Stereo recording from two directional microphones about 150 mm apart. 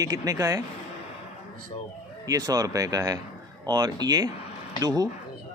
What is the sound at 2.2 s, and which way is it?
A woman's voice, 25° right (ahead or behind).